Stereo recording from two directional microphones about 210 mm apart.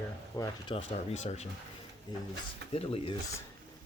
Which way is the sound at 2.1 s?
20° left (ahead or behind).